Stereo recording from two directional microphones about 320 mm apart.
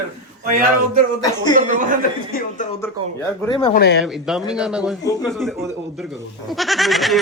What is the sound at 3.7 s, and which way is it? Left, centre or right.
Speech, left.